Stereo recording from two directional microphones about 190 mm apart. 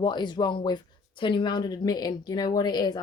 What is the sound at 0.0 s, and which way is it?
Speech, 25° left (ahead or behind).